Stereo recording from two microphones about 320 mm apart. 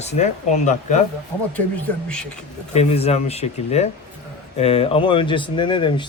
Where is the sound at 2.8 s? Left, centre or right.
Centre.